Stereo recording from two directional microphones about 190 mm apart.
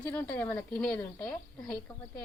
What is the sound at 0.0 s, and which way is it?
A woman's voice, 10° left (ahead or behind).